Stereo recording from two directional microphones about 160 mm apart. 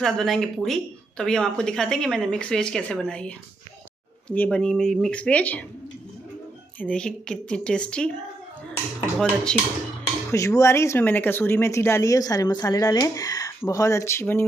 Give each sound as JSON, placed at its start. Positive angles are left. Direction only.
{"t": 0.0, "sound": "speech", "side_deg": 0}
{"t": 6.8, "sound": "speech", "side_deg": 5}
{"t": 9.2, "sound": "speech", "side_deg": 5}
{"t": 10.3, "sound": "speech", "side_deg": 20}